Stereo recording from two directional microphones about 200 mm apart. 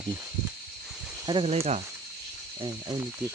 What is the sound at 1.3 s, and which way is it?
Speech, 30° right (ahead or behind).